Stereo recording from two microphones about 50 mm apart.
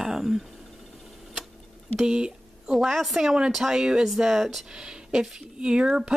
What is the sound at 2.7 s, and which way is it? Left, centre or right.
Speech, centre.